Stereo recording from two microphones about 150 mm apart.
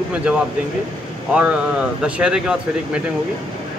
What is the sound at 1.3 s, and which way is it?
Speech, 10° right (ahead or behind).